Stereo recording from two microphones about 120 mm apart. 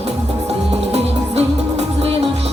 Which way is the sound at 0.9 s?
60° right (ahead or behind).